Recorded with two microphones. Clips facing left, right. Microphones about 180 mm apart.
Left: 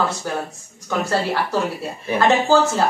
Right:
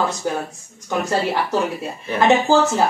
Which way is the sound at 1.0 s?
20° right (ahead or behind).